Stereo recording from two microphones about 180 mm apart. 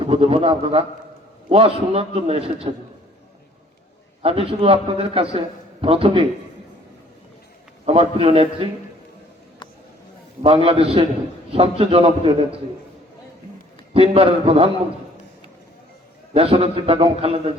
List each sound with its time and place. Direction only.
0.0 s a man's voice: 30° right (ahead or behind)
4.2 s a man's voice: 30° right (ahead or behind)
7.9 s a man's voice: 35° right (ahead or behind)
10.4 s a man's voice: 30° right (ahead or behind)
13.9 s a man's voice: 35° right (ahead or behind)
16.3 s a man's voice: 30° right (ahead or behind)